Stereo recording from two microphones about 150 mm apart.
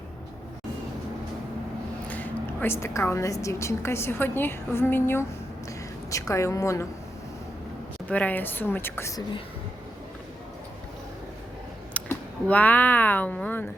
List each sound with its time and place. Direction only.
2.0 s a woman's voice: 10° left (ahead or behind)
8.1 s a woman's voice: 10° left (ahead or behind)
11.9 s speech: 10° left (ahead or behind)